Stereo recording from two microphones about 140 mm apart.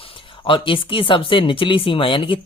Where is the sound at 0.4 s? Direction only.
40° left (ahead or behind).